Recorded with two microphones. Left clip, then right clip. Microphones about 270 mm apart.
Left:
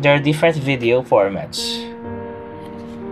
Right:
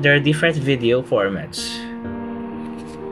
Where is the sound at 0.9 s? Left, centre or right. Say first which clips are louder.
Left 5 dB; left.